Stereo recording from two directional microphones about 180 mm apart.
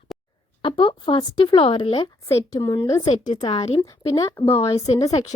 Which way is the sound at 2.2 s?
20° left (ahead or behind).